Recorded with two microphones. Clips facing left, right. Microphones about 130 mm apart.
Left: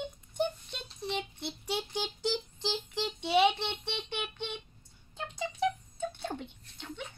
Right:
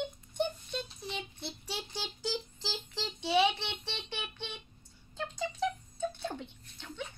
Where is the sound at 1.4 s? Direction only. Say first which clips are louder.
Left 5 dB; 20° left (ahead or behind).